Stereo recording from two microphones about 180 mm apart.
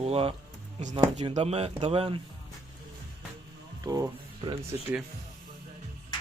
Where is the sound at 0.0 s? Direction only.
35° right (ahead or behind).